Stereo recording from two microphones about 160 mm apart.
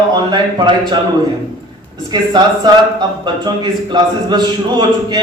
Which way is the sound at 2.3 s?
25° right (ahead or behind).